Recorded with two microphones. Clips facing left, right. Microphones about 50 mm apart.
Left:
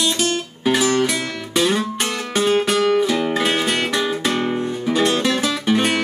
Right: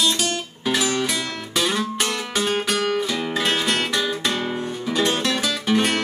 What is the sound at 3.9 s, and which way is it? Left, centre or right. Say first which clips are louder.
Music: left 3 dB; left.